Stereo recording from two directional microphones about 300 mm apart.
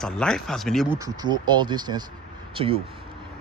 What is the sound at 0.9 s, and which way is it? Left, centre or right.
Speech, centre.